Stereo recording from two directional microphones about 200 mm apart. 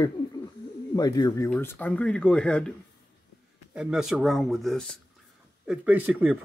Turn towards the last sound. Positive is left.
turn(degrees=-10)  # may be behind; listen again after turning